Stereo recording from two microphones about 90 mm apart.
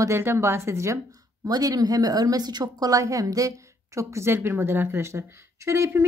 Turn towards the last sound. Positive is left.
turn(degrees=-30)  # may be behind; listen again after turning